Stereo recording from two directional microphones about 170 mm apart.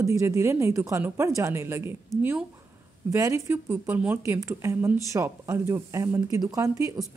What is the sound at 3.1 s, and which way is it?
Speech, 15° right (ahead or behind).